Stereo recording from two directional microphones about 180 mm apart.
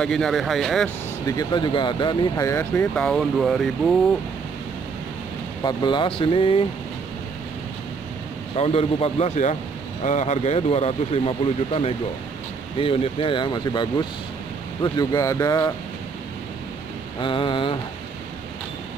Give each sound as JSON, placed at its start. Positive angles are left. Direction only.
{"t": 0.0, "sound": "speech", "side_deg": 5}
{"t": 1.2, "sound": "speech", "side_deg": 20}
{"t": 5.6, "sound": "speech", "side_deg": 25}
{"t": 8.5, "sound": "speech", "side_deg": 35}
{"t": 17.2, "sound": "speech", "side_deg": 30}